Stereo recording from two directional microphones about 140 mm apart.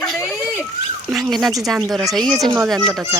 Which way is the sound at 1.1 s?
Centre (ahead or behind).